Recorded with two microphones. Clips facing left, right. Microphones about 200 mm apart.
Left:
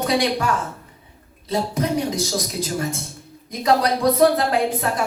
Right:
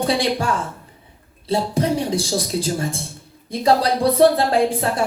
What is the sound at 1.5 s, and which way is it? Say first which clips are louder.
Speech: right 2 dB; 30° right (ahead or behind).